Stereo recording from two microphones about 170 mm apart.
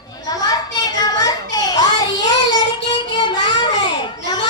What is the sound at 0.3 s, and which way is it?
Children playing, 20° left (ahead or behind).